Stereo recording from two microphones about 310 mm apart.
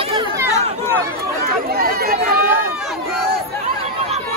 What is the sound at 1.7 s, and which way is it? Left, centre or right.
Chatter, right.